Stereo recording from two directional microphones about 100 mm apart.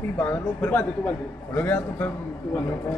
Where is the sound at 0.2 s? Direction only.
20° left (ahead or behind).